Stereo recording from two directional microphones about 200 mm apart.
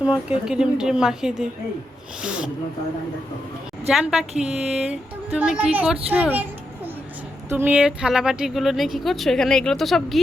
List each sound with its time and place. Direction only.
0.0 s speech: 5° right (ahead or behind)
3.8 s speech: centre (ahead or behind)
7.5 s speech: 10° right (ahead or behind)